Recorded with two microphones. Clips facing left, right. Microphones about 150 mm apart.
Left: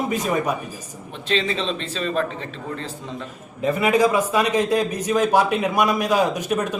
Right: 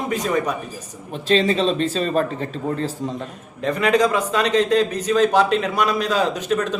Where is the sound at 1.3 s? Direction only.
40° right (ahead or behind).